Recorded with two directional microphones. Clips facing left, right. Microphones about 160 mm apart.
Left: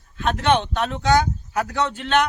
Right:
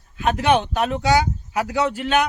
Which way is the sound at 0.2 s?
10° right (ahead or behind).